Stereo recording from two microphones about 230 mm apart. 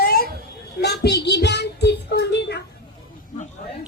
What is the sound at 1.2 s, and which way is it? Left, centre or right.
Child singing, left.